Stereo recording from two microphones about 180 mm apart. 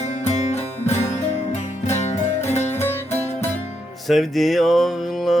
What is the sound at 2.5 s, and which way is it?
Music, 40° left (ahead or behind).